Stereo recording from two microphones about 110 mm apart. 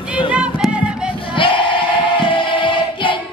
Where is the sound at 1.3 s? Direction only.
50° left (ahead or behind).